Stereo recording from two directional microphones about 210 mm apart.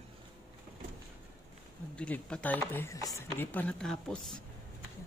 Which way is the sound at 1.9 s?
5° left (ahead or behind).